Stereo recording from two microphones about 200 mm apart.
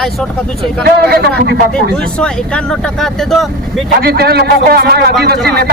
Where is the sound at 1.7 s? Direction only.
5° left (ahead or behind).